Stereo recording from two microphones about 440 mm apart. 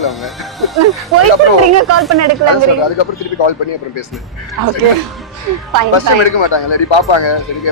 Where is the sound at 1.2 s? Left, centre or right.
Right.